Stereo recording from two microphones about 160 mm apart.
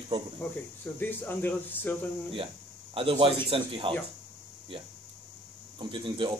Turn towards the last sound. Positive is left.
turn(degrees=-30)  # may be behind; listen again after turning